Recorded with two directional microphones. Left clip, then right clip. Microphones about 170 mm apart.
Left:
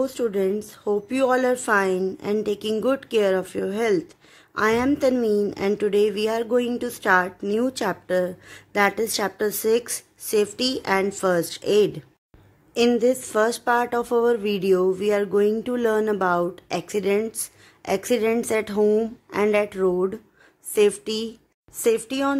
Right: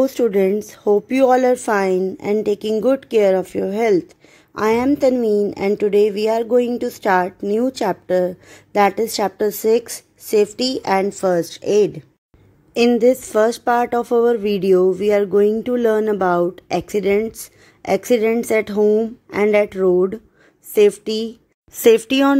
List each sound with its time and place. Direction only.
0.0 s speech: 40° right (ahead or behind); by 12.0 s 15° right (ahead or behind)
12.7 s speech: 30° right (ahead or behind)
21.7 s speech: 50° right (ahead or behind)